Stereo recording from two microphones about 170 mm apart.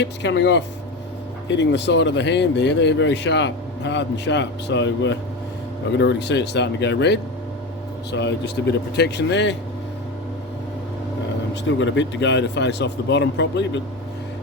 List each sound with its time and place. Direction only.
0.0 s speech: 90° left
11.8 s speech: 90° left